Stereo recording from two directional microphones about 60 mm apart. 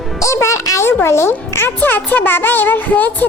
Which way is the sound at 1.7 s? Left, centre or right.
Left.